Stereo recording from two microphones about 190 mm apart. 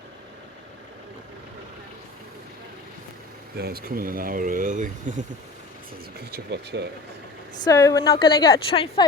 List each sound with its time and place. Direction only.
3.6 s speech: 55° right (ahead or behind)
6.1 s speech: 60° right (ahead or behind)
7.6 s a woman's voice: 20° left (ahead or behind)